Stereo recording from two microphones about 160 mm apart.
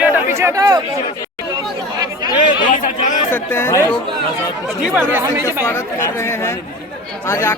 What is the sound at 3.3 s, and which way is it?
Speech, 15° left (ahead or behind).